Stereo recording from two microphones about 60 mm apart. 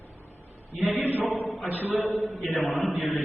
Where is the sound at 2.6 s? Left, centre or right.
Left.